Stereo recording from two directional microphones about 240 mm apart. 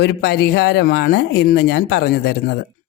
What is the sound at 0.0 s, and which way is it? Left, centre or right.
Speech, left.